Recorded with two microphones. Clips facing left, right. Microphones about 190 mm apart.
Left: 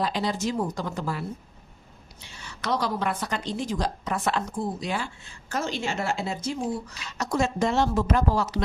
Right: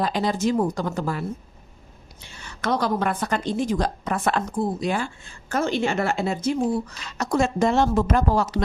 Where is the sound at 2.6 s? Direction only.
50° right (ahead or behind).